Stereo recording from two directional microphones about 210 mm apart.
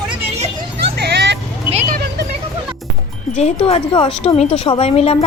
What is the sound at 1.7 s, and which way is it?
Vehicle, 40° right (ahead or behind).